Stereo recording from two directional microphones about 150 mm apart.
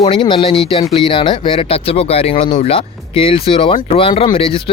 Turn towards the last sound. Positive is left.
turn(degrees=35)  # may be behind; listen again after turning